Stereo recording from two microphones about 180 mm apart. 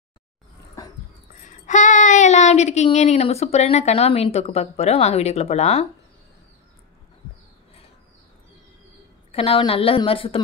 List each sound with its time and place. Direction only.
1.7 s a woman's voice: 45° left (ahead or behind)
9.3 s a woman's voice: 30° left (ahead or behind)